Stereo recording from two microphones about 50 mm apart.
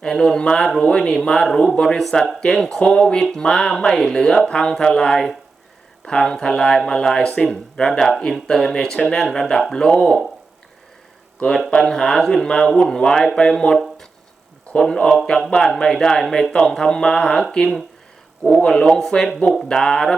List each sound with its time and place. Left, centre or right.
0.0 s speech: centre
2.0 s speech: centre
11.7 s speech: centre
14.8 s speech: centre